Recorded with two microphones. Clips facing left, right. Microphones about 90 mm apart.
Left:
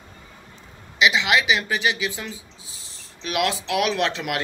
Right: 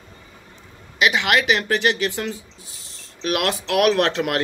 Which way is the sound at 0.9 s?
50° right (ahead or behind).